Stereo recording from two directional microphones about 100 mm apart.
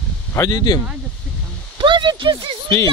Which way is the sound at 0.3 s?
30° left (ahead or behind).